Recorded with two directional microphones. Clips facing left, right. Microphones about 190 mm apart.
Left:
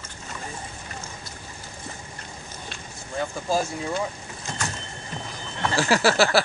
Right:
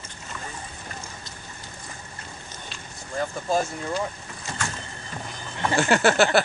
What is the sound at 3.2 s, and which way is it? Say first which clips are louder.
Speech: even; centre (ahead or behind).